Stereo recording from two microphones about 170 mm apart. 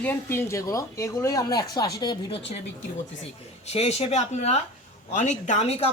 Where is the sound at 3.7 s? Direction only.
40° left (ahead or behind).